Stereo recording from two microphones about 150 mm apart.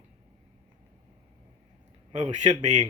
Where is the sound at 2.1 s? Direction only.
45° right (ahead or behind).